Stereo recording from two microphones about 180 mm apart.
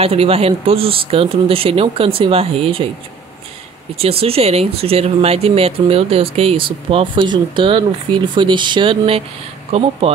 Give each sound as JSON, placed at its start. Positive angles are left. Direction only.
{"t": 0.0, "sound": "speech", "side_deg": -35}
{"t": 4.0, "sound": "speech", "side_deg": -30}